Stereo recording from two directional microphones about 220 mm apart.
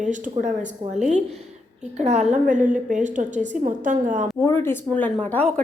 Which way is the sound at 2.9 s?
35° right (ahead or behind).